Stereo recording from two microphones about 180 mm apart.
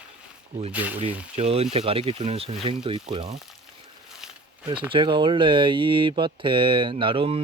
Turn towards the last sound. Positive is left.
turn(degrees=-30)  # may be behind; listen again after turning